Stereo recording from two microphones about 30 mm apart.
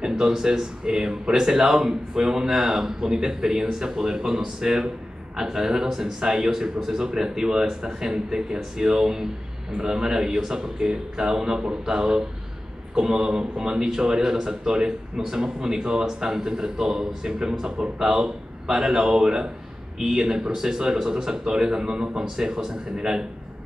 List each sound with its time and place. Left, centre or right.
0.2 s a man's voice: right
20.0 s a man's voice: centre